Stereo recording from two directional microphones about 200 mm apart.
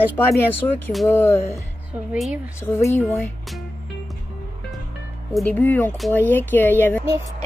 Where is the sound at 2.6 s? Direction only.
15° left (ahead or behind).